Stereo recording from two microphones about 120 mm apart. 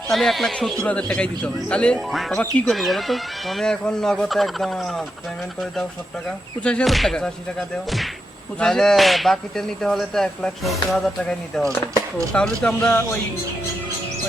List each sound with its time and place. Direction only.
0.1 s a man's voice: centre (ahead or behind)
2.7 s a man's voice: centre (ahead or behind)
6.6 s a man's voice: 10° left (ahead or behind)
8.5 s a man's voice: 5° left (ahead or behind)